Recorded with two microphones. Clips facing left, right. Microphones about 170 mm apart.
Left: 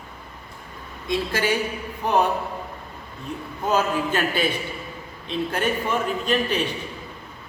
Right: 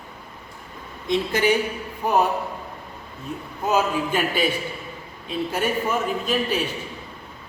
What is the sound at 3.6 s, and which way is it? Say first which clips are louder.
A man's voice: even; 10° right (ahead or behind).